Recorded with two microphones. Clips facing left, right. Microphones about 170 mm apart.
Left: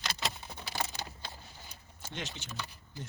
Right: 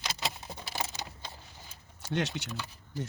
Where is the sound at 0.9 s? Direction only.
20° right (ahead or behind).